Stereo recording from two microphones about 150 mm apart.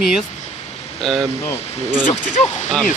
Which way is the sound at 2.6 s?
5° left (ahead or behind).